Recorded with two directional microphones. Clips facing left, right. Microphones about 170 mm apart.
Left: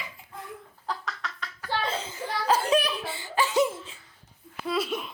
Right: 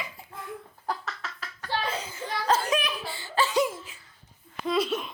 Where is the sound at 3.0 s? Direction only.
20° left (ahead or behind).